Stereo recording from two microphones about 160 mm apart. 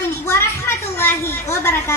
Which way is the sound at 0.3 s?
15° left (ahead or behind).